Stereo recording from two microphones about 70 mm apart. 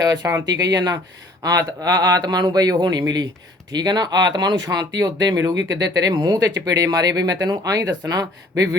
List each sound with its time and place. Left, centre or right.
0.2 s speech: right
0.6 s speech: right
3.7 s speech: right